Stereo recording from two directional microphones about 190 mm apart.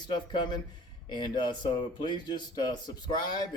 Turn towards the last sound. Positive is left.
turn(degrees=20)  # may be behind; listen again after turning